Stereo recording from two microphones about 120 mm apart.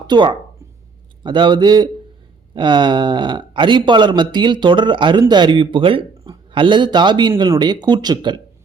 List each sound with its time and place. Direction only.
0.1 s speech: 40° right (ahead or behind)